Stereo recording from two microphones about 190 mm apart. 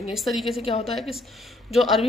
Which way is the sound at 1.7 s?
Centre (ahead or behind).